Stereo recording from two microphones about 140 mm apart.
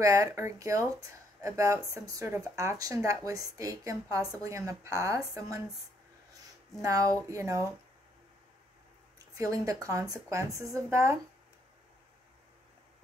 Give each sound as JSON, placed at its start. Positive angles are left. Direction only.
{"t": 0.0, "sound": "speech", "side_deg": -25}
{"t": 6.8, "sound": "speech", "side_deg": -25}
{"t": 9.4, "sound": "speech", "side_deg": -25}